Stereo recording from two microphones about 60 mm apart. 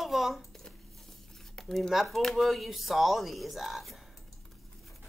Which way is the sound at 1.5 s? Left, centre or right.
Centre.